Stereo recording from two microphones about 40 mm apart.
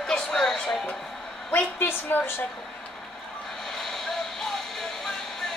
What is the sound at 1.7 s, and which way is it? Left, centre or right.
Speech, left.